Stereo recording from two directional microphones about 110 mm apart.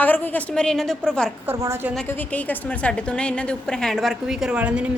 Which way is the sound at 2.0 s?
15° left (ahead or behind).